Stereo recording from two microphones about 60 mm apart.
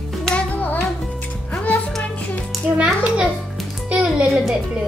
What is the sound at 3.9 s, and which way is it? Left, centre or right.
Music, centre.